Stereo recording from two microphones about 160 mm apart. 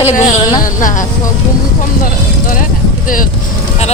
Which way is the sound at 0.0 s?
50° left (ahead or behind).